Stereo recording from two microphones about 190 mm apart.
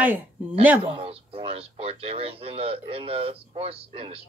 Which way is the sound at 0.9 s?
30° right (ahead or behind).